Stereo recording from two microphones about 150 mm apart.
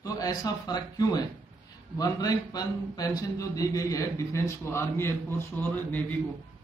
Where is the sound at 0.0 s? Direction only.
25° left (ahead or behind).